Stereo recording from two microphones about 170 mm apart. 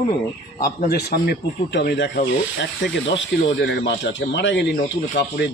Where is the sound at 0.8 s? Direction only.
65° left (ahead or behind).